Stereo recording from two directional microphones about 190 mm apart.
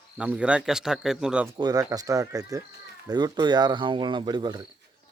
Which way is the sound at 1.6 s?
20° right (ahead or behind).